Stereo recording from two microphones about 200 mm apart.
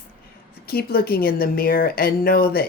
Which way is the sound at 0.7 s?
50° left (ahead or behind).